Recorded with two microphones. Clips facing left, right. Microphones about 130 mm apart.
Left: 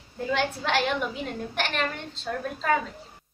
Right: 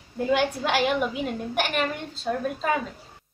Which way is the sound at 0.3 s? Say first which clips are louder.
Right 3 dB; 10° right (ahead or behind).